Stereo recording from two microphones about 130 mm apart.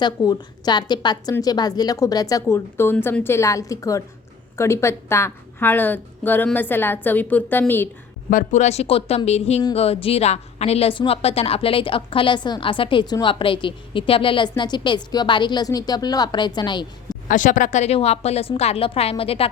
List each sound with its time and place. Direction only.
0.0 s a woman's voice: 30° left (ahead or behind); by 7.9 s 15° left (ahead or behind)
8.3 s a woman's voice: 80° left; by 17.2 s 35° left (ahead or behind)
17.2 s a woman's voice: 85° left; by 19.5 s 45° left (ahead or behind)